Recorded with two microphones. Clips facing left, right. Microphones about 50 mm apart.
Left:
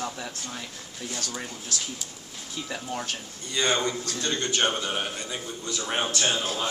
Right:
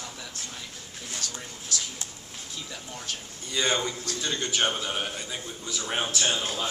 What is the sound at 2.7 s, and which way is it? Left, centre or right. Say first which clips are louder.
Speech: left 7 dB; left.